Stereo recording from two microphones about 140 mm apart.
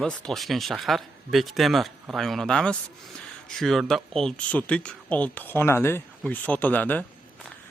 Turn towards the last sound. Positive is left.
turn(degrees=10)  # may be behind; listen again after turning